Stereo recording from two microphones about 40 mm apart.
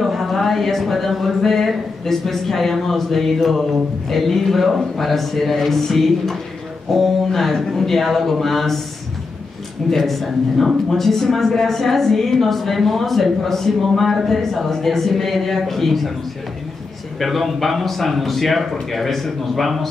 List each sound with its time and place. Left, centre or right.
0.0 s speech: centre
9.8 s speech: centre
17.2 s speech: centre